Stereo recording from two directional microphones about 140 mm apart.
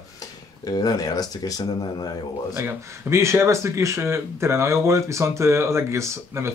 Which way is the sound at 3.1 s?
20° right (ahead or behind).